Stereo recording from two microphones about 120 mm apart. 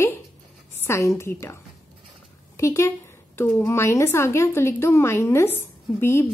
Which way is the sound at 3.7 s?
25° left (ahead or behind).